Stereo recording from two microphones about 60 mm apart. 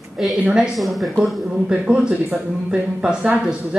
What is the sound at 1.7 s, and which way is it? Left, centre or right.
Speech, centre.